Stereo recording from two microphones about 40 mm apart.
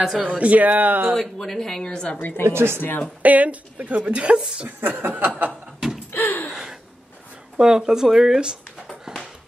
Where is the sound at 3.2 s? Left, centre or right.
Right.